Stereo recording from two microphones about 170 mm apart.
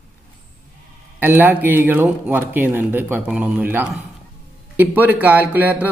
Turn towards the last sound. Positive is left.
turn(degrees=-10)  # may be behind; listen again after turning